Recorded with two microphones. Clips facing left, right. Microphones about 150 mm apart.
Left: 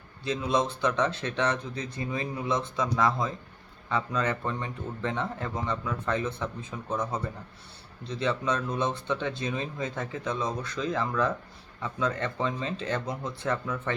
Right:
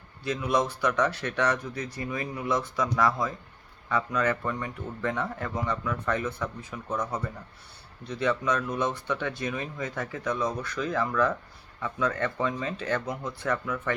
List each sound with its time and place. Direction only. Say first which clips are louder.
0.3 s speech: even; 25° left (ahead or behind)